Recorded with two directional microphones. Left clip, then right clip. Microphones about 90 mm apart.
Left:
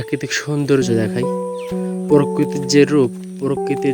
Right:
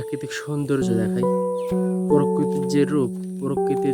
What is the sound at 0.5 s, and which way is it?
Speech, 25° left (ahead or behind).